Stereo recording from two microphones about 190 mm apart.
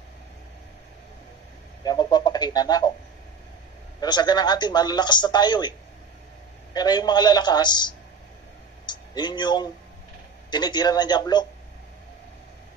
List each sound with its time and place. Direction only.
1.8 s bird: 20° left (ahead or behind)
4.0 s a man's voice: 20° left (ahead or behind)